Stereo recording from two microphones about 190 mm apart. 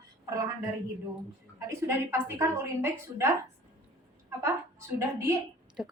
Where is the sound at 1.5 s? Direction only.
15° right (ahead or behind).